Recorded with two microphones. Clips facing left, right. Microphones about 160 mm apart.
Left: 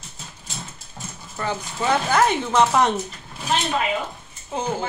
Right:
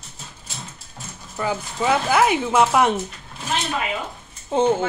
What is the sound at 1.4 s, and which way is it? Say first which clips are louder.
A woman's voice: right 2 dB; 10° right (ahead or behind).